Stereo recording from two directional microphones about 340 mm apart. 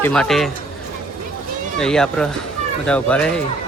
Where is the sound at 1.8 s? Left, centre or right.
Centre.